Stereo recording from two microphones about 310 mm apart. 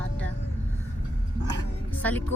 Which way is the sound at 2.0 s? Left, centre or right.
Centre.